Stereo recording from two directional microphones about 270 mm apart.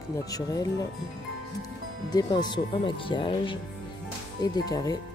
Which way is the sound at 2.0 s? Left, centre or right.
Centre.